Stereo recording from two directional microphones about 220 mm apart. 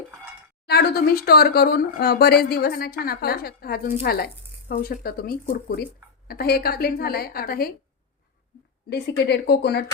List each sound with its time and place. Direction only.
0.7 s speech: 45° left (ahead or behind)
8.9 s speech: 50° left (ahead or behind)